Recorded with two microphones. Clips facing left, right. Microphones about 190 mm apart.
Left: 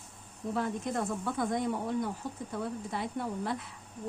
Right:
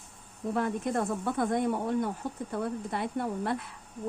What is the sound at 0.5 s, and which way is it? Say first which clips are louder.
Speech: right 3 dB; 55° right (ahead or behind).